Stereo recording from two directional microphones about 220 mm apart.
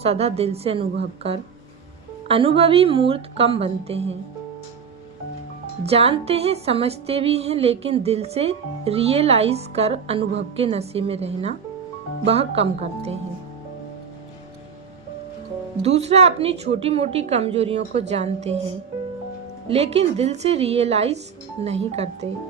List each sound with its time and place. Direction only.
0.0 s music: 30° right (ahead or behind)
2.2 s music: 25° right (ahead or behind)
5.8 s music: 30° right (ahead or behind)
15.8 s music: 30° right (ahead or behind)
19.6 s music: 30° right (ahead or behind)